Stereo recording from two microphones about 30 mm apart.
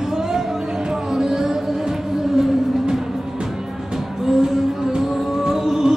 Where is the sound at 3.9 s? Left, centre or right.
Centre.